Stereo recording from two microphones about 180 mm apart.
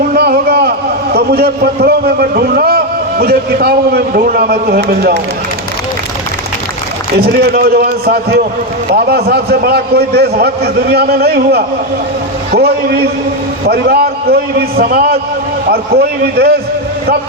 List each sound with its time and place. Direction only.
0.1 s a man's voice: 55° right (ahead or behind)
7.2 s a man's voice: 60° right (ahead or behind)